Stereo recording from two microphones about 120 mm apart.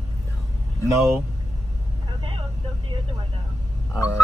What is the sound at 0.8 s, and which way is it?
Speech, 25° right (ahead or behind).